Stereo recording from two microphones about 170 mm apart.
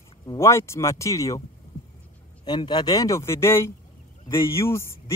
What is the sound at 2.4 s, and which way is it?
Speech, 25° left (ahead or behind).